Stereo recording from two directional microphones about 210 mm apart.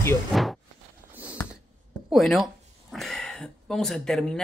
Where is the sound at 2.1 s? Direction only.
Centre (ahead or behind).